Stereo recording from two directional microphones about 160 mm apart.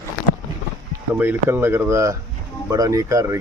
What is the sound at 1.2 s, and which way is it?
Speech, 15° right (ahead or behind).